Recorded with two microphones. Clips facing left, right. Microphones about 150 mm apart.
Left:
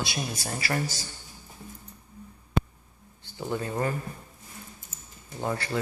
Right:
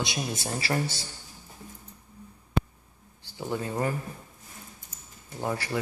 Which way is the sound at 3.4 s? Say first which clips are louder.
Even; 15° right (ahead or behind).